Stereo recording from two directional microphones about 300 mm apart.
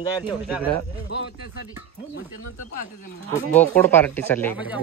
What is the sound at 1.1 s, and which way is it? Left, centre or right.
Speech, left.